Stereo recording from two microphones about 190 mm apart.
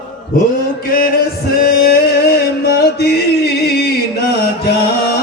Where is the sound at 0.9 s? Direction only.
50° left (ahead or behind).